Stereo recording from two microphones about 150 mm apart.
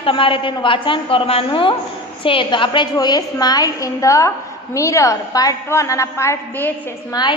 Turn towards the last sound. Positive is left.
turn(degrees=30)  # may be behind; listen again after turning